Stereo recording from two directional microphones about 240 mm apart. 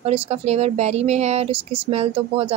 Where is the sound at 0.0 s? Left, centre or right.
Right.